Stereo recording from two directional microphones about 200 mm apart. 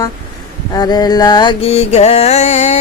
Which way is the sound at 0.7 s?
20° left (ahead or behind).